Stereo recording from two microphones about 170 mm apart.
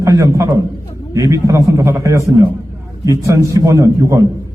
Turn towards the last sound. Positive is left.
turn(degrees=-20)  # may be behind; listen again after turning